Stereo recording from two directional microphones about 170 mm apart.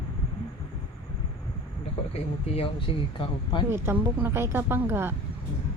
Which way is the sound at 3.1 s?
30° left (ahead or behind).